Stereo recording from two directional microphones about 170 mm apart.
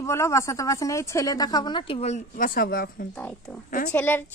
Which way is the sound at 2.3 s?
55° left (ahead or behind).